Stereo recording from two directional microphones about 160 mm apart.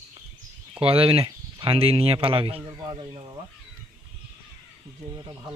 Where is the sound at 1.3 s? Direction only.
25° right (ahead or behind).